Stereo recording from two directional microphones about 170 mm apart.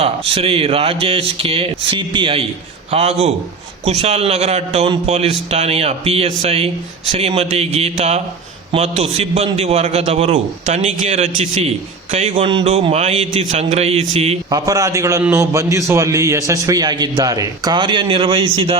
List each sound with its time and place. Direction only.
0.0 s a man's voice: 35° right (ahead or behind)
14.5 s a man's voice: 20° right (ahead or behind)